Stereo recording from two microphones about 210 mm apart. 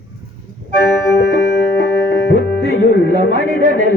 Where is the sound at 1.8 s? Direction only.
55° left (ahead or behind).